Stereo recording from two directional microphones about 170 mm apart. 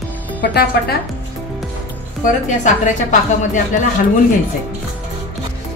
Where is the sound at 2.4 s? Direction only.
45° left (ahead or behind).